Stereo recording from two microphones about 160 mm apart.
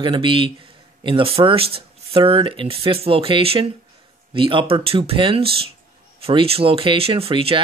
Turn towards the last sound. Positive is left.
turn(degrees=-35)  # may be behind; listen again after turning